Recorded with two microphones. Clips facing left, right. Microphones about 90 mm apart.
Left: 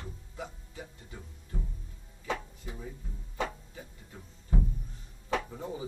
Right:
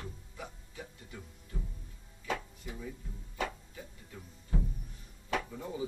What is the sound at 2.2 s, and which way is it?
Music, 25° left (ahead or behind).